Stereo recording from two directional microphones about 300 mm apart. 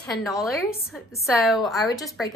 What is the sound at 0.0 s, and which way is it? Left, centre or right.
A woman's voice, centre.